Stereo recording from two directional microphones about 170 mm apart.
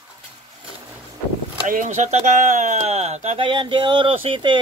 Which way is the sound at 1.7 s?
45° right (ahead or behind).